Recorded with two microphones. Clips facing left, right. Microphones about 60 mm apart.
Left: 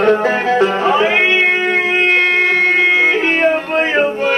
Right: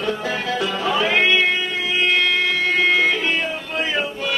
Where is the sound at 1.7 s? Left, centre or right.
Left.